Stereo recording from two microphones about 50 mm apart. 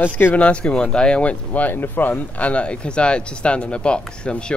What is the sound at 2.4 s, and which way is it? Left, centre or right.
Speech, left.